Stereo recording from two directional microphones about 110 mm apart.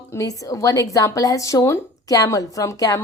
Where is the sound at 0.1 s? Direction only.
30° left (ahead or behind).